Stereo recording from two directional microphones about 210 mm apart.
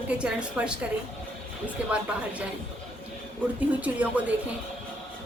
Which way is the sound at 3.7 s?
5° right (ahead or behind).